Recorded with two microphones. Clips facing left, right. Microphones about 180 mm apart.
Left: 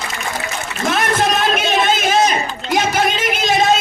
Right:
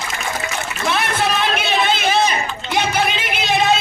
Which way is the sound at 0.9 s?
45° left (ahead or behind).